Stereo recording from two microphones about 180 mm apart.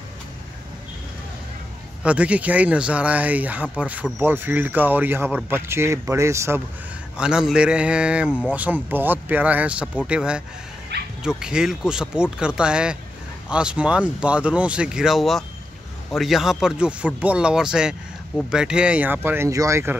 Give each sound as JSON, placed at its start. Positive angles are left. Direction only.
{"t": 2.0, "sound": "speech", "side_deg": -5}
{"t": 7.2, "sound": "speech", "side_deg": -5}
{"t": 10.9, "sound": "dog", "side_deg": -65}
{"t": 11.2, "sound": "speech", "side_deg": -5}